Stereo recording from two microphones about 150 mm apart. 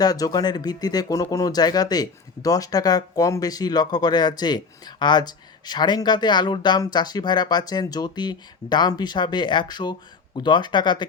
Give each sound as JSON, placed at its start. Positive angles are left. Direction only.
{"t": 0.0, "sound": "speech", "side_deg": 25}